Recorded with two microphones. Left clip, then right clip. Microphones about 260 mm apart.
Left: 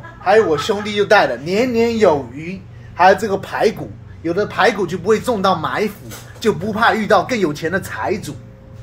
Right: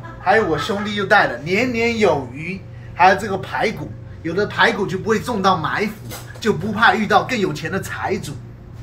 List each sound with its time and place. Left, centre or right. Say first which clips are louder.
0.2 s speech: left 3 dB; left
1.8 s a man's voice: left 5 dB; left
3.0 s speech: left 2 dB; left